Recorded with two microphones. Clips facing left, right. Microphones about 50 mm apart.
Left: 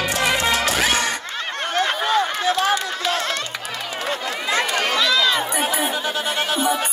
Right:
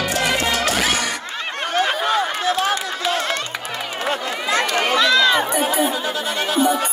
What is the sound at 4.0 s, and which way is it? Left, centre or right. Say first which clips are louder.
Run: right 2 dB; right.